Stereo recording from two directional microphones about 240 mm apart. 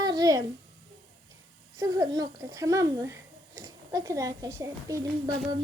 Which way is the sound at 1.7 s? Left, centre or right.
Centre.